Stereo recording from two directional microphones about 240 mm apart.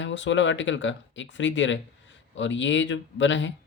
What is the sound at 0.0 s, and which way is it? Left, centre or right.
Speech, left.